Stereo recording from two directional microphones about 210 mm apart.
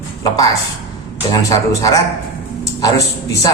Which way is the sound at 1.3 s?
15° left (ahead or behind).